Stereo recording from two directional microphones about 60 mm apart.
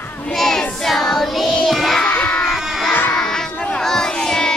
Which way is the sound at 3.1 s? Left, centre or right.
Centre.